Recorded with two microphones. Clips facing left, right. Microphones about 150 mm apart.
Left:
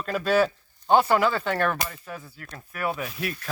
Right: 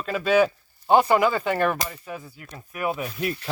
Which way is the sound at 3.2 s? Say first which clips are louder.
Right 4 dB; 25° right (ahead or behind).